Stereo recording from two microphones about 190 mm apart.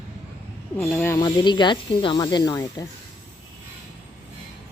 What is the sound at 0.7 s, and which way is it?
Speech, 10° left (ahead or behind).